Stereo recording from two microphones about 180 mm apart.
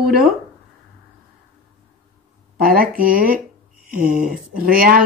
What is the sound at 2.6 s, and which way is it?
Speech, 55° right (ahead or behind).